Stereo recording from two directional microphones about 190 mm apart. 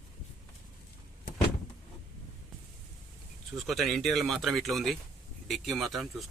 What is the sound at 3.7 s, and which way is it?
Speech, centre (ahead or behind).